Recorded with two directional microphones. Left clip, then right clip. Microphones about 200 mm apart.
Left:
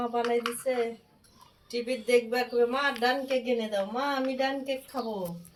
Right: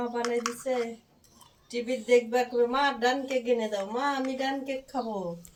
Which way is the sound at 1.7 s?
30° left (ahead or behind).